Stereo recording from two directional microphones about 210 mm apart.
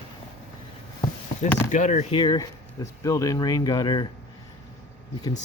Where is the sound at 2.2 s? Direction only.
20° left (ahead or behind).